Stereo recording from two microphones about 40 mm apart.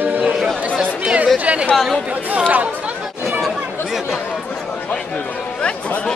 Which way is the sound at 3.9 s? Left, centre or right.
Centre.